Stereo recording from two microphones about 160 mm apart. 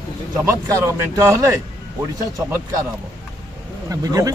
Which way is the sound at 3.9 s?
20° right (ahead or behind).